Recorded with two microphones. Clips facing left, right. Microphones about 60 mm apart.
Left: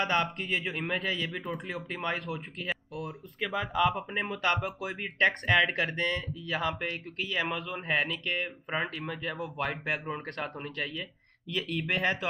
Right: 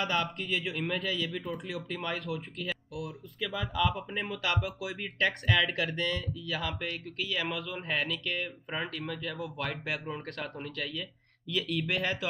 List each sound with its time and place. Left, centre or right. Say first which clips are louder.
0.0 s speech: left 2 dB; left